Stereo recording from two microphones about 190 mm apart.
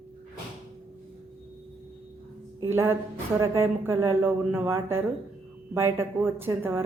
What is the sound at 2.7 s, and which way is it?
Speech, 15° right (ahead or behind).